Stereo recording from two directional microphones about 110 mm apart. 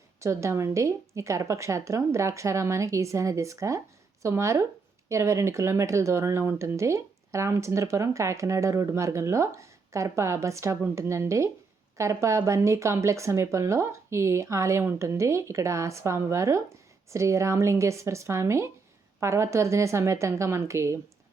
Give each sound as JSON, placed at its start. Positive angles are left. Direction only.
{"t": 0.2, "sound": "speech", "side_deg": -25}